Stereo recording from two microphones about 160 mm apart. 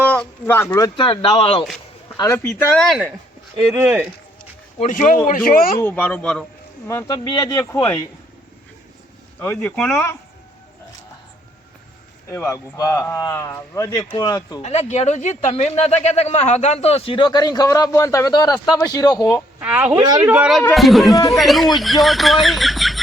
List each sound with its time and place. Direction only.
0.0 s speech: 10° left (ahead or behind)
0.9 s speech: 35° left (ahead or behind)
2.1 s speech: 20° left (ahead or behind)
2.4 s speech: 5° left (ahead or behind); by 4.1 s 10° right (ahead or behind)
4.8 s speech: 55° left (ahead or behind)
5.8 s speech: 10° left (ahead or behind)
6.8 s speech: 20° left (ahead or behind)
9.4 s speech: 10° left (ahead or behind)
12.3 s speech: 15° left (ahead or behind)
14.6 s speech: 45° left (ahead or behind); by 19.4 s 25° left (ahead or behind)
19.5 s speech: 10° right (ahead or behind)
19.9 s speech: 25° right (ahead or behind)
20.2 s speech: 5° right (ahead or behind)